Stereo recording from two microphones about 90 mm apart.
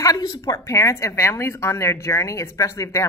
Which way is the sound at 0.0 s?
40° left (ahead or behind).